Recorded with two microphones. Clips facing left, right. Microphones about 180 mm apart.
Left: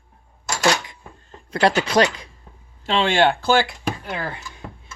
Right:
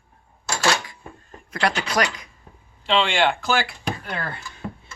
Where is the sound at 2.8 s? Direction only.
40° left (ahead or behind).